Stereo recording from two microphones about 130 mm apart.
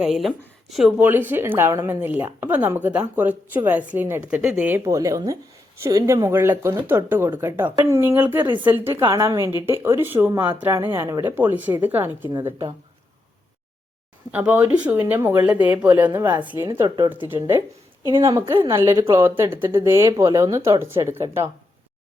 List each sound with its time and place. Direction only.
0.0 s speech: centre (ahead or behind)
1.0 s speech: 15° right (ahead or behind)
14.3 s speech: 10° right (ahead or behind)
16.8 s speech: 30° right (ahead or behind)
18.7 s speech: 20° right (ahead or behind)